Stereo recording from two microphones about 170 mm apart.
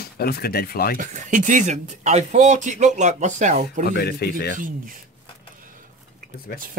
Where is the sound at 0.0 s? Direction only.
65° left (ahead or behind).